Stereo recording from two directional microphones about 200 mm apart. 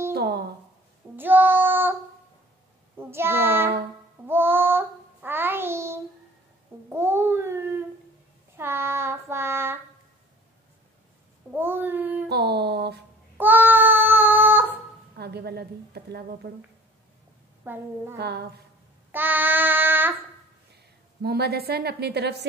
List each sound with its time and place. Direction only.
0.1 s a sound: 55° right (ahead or behind)
1.1 s child singing: 10° right (ahead or behind)
3.0 s child singing: 10° right (ahead or behind)
6.9 s babbling: 10° right (ahead or behind)
8.5 s child singing: 10° right (ahead or behind)
11.5 s child singing: 10° right (ahead or behind)
12.3 s music: 55° right (ahead or behind)
13.4 s child singing: 10° right (ahead or behind)
15.1 s a woman's voice: 55° right (ahead or behind)
17.6 s a woman's voice: 10° right (ahead or behind)
18.1 s a sound: 55° right (ahead or behind)
19.1 s child singing: 10° right (ahead or behind)
21.2 s a woman's voice: 50° right (ahead or behind)